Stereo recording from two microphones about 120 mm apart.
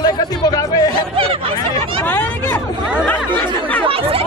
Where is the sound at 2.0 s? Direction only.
15° left (ahead or behind).